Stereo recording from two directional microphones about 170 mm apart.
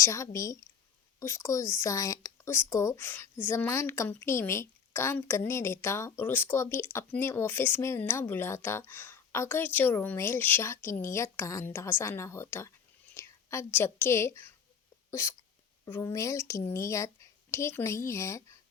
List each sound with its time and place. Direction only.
0.0 s a woman's voice: 20° left (ahead or behind)